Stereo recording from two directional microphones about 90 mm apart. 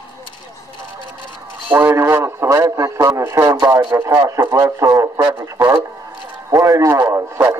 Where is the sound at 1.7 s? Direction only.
20° right (ahead or behind).